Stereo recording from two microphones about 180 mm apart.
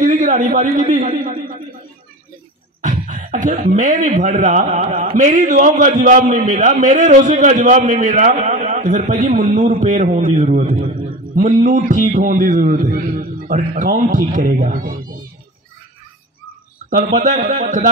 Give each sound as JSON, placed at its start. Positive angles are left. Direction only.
{"t": 0.0, "sound": "a sound", "side_deg": -45}
{"t": 2.8, "sound": "a man's voice", "side_deg": -45}
{"t": 16.9, "sound": "a man's voice", "side_deg": -40}